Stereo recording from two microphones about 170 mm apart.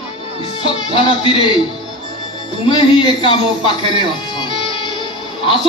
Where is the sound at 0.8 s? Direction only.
30° left (ahead or behind).